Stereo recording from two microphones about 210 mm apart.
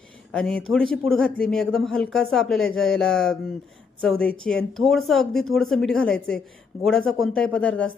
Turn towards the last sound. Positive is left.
turn(degrees=5)  # may be behind; listen again after turning